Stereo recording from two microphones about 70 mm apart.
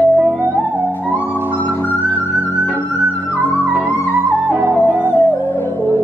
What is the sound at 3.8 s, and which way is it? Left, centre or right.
Music, left.